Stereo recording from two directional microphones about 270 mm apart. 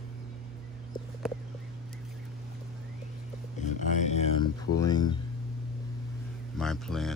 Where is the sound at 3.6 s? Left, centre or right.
Left.